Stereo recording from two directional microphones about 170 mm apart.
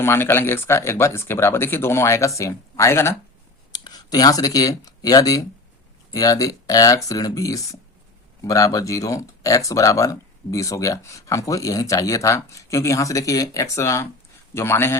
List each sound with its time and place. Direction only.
0.0 s speech: 15° left (ahead or behind)